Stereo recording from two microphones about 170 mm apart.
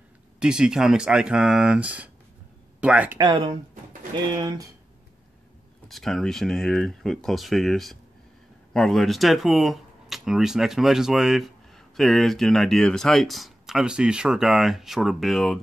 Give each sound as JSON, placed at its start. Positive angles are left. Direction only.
{"t": 0.4, "sound": "speech", "side_deg": -5}
{"t": 3.2, "sound": "speech", "side_deg": -30}
{"t": 5.9, "sound": "speech", "side_deg": 0}